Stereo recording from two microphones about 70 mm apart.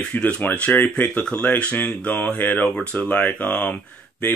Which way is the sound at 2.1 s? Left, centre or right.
Left.